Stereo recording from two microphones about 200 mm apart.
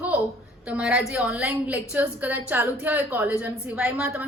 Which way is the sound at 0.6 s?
5° right (ahead or behind).